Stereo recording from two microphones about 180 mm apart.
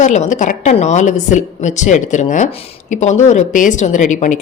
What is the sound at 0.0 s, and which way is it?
A woman's voice, 40° left (ahead or behind).